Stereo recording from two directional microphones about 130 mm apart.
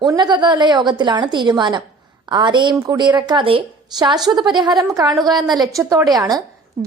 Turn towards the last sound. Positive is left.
turn(degrees=-30)  # may be behind; listen again after turning